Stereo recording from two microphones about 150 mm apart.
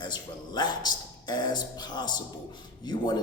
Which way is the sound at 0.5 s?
30° left (ahead or behind).